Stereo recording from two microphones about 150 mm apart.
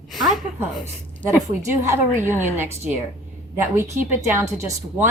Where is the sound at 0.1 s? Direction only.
Centre (ahead or behind).